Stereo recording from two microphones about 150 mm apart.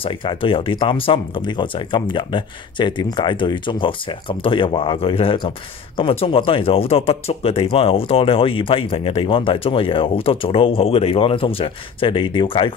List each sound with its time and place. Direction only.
0.0 s speech: 35° left (ahead or behind)